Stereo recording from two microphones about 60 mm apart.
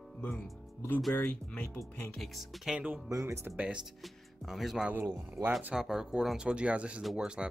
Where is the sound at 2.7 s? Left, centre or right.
Right.